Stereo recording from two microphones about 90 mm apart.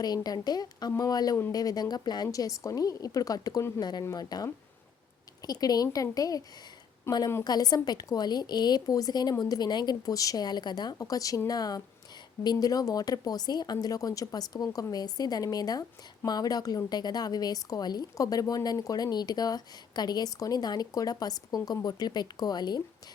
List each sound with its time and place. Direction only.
0.0 s speech: 45° left (ahead or behind)
5.5 s speech: 45° left (ahead or behind)
7.1 s a woman's voice: 30° left (ahead or behind)
7.4 s speech: 45° left (ahead or behind)
10.9 s speech: 40° left (ahead or behind)